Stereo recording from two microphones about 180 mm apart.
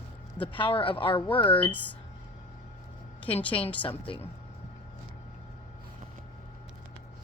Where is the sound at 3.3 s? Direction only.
30° left (ahead or behind).